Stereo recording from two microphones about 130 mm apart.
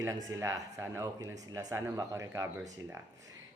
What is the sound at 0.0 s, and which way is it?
Speech, 25° right (ahead or behind).